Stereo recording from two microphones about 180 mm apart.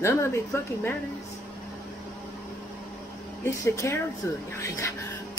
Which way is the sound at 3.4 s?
15° left (ahead or behind).